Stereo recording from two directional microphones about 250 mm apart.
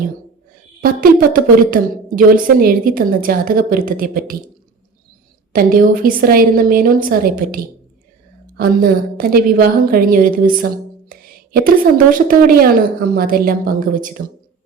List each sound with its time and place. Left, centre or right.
1.0 s a woman's voice: right
5.5 s a woman's voice: right